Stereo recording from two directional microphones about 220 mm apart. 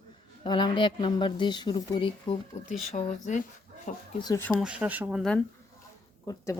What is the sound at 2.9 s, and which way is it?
Speech, 35° left (ahead or behind).